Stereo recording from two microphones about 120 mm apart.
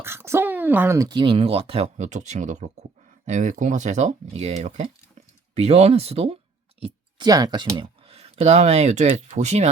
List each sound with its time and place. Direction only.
0.0 s speech: 20° right (ahead or behind)
0.9 s speech: 35° right (ahead or behind); by 6.9 s 55° right (ahead or behind)
7.2 s speech: 30° right (ahead or behind)
8.0 s speech: 55° right (ahead or behind)